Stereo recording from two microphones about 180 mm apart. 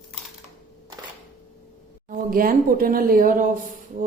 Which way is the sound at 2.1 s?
50° right (ahead or behind).